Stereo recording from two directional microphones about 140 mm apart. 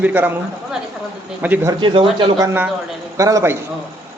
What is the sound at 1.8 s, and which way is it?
Speech, 40° right (ahead or behind).